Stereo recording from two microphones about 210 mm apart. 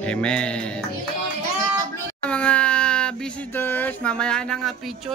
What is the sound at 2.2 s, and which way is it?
Speech, 5° left (ahead or behind).